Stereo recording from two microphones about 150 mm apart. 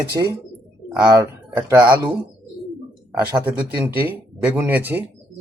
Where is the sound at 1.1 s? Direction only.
15° right (ahead or behind).